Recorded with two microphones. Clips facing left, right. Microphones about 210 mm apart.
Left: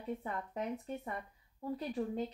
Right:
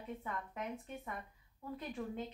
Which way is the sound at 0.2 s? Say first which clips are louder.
Left 4 dB; 35° left (ahead or behind).